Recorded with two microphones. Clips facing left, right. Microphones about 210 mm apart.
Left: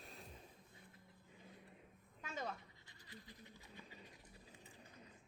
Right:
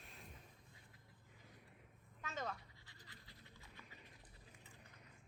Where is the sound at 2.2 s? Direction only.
10° left (ahead or behind).